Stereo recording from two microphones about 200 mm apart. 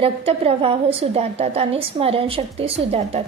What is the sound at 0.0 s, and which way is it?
A woman's voice, 30° right (ahead or behind).